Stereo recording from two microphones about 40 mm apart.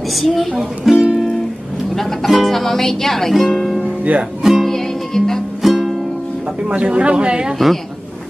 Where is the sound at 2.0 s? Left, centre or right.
Centre.